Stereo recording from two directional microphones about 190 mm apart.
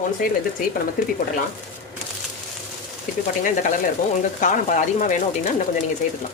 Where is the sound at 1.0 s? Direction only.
50° left (ahead or behind).